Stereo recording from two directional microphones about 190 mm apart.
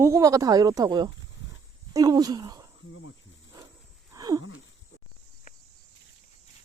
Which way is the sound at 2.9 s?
90° left.